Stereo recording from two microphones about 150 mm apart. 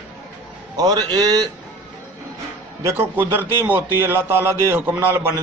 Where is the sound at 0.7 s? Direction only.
25° right (ahead or behind).